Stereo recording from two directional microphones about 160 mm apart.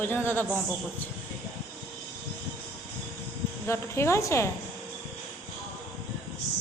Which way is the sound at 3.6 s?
15° left (ahead or behind).